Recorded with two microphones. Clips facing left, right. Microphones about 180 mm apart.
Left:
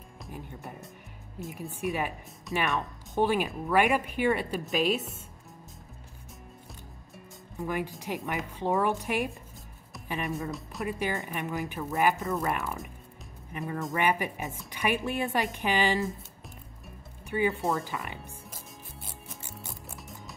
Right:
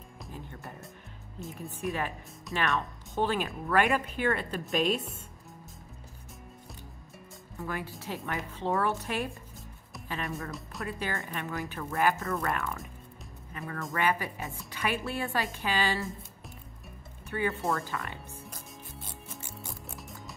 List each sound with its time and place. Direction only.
0.3 s speech: 10° left (ahead or behind)
2.5 s speech: centre (ahead or behind)
3.2 s a woman's voice: 10° left (ahead or behind)
7.5 s speech: 15° left (ahead or behind)
10.5 s speech: centre (ahead or behind)
10.9 s speech: 15° left (ahead or behind)
17.5 s a woman's voice: centre (ahead or behind)
17.7 s speech: 20° left (ahead or behind)
19.7 s music: centre (ahead or behind)